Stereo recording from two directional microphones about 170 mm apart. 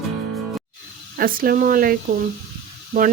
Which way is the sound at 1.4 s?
55° right (ahead or behind).